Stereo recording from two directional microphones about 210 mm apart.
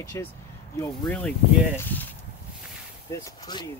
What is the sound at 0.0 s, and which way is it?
Speech, 15° left (ahead or behind).